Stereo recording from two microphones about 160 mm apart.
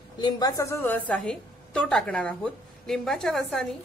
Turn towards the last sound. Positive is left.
turn(degrees=5)  # may be behind; listen again after turning